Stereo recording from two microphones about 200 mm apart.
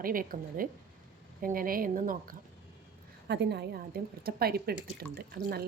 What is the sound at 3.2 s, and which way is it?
A woman's voice, 55° right (ahead or behind).